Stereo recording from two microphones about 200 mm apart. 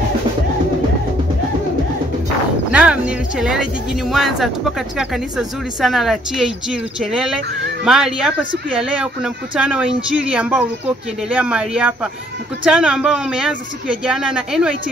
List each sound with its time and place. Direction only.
2.7 s speech: 5° right (ahead or behind)